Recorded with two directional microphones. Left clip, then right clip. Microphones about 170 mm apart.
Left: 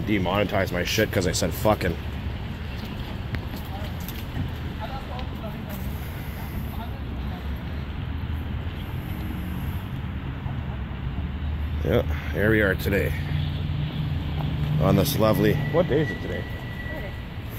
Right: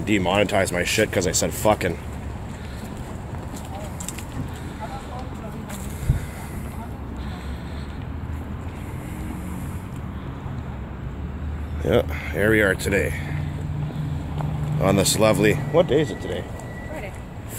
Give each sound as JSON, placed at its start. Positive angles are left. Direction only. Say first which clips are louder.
{"t": 0.0, "sound": "speech", "louder": "right 4 dB", "side_deg": -35}
{"t": 0.8, "sound": "speech", "louder": "right 3 dB", "side_deg": -10}
{"t": 11.8, "sound": "speech", "louder": "right 4 dB", "side_deg": -20}
{"t": 14.8, "sound": "speech", "louder": "right 3 dB", "side_deg": -10}